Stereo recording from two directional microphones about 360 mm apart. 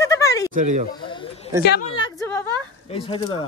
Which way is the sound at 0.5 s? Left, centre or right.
Right.